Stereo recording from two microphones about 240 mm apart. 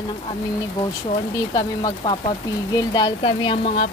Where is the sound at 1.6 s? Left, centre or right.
Centre.